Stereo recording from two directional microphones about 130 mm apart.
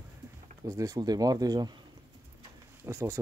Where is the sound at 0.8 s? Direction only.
30° right (ahead or behind).